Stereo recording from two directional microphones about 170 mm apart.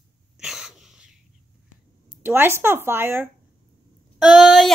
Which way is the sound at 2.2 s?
15° right (ahead or behind).